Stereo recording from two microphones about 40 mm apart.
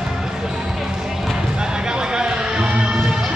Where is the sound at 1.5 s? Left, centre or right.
Centre.